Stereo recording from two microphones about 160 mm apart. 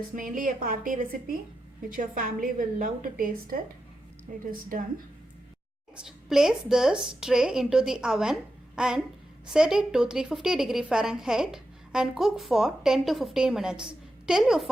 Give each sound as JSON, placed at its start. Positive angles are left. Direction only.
{"t": 0.2, "sound": "a woman's voice", "side_deg": -60}
{"t": 6.1, "sound": "a woman's voice", "side_deg": 0}